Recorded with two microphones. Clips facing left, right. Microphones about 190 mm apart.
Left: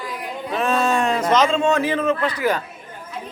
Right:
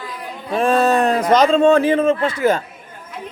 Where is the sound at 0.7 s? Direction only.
35° right (ahead or behind).